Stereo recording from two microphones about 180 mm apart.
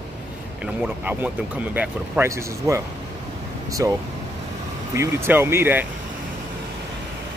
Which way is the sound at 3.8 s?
15° right (ahead or behind).